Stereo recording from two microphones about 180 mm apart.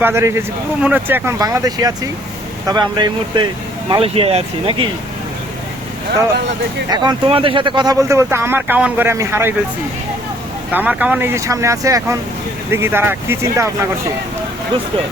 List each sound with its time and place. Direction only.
0.0 s speech: 15° right (ahead or behind); by 4.9 s 30° right (ahead or behind)
6.9 s speech: 25° right (ahead or behind)
10.7 s speech: 10° right (ahead or behind)